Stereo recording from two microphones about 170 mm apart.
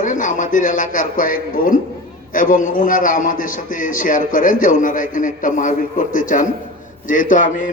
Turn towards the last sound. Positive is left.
turn(degrees=50)  # may be behind; listen again after turning